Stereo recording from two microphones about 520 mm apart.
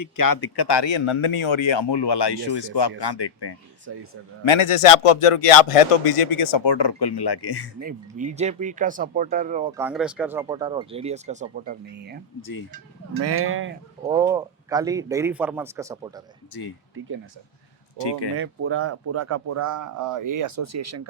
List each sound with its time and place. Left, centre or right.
0.2 s speech: left
3.9 s speech: right
4.4 s speech: left
6.7 s speech: left
7.8 s speech: centre
12.4 s speech: left
13.2 s speech: right
14.1 s speech: centre
17.9 s speech: left
18.3 s speech: right